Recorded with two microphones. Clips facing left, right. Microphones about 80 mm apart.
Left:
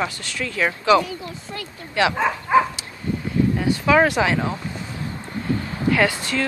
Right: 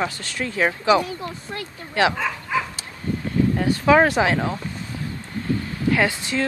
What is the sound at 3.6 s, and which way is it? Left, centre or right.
Speech, right.